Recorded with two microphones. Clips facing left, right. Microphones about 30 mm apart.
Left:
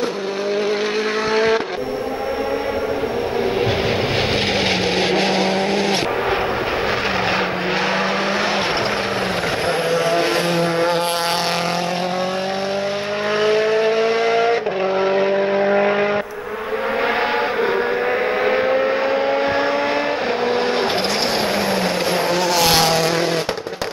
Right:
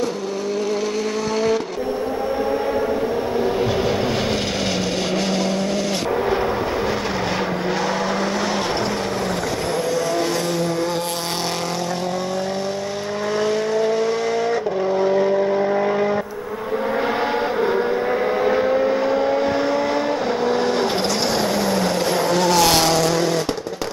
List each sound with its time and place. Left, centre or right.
1.3 s vehicle: left
4.3 s vehicle: left
7.2 s vehicle: left
13.4 s vehicle: left
17.0 s vehicle: left